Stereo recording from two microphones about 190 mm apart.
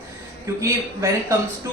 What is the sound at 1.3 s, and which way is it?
Speech, 15° right (ahead or behind).